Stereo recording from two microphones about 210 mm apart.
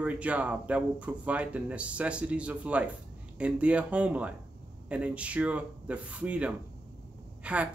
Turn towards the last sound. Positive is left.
turn(degrees=-5)  # may be behind; listen again after turning